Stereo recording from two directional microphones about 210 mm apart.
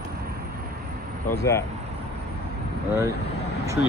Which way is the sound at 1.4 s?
15° left (ahead or behind).